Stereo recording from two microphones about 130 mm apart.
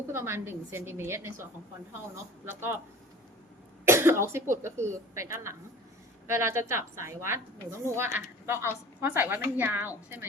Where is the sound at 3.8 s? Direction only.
20° right (ahead or behind).